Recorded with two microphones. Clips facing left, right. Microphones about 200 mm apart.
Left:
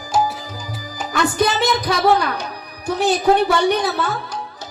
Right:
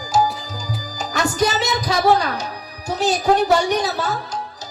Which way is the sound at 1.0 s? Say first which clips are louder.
Left 2 dB; 55° left (ahead or behind).